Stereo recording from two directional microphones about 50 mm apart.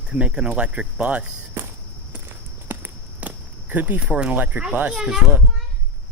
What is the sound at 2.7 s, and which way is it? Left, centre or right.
Walk, right.